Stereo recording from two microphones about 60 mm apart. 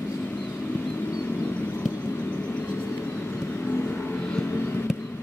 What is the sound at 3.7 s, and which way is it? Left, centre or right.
Vehicle, left.